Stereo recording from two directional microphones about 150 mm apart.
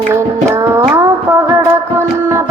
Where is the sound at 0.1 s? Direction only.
20° right (ahead or behind).